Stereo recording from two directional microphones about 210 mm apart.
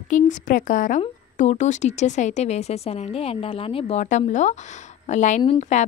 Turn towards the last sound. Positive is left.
turn(degrees=30)  # may be behind; listen again after turning